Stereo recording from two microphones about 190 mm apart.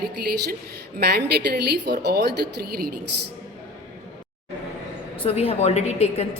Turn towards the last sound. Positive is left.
turn(degrees=35)  # may be behind; listen again after turning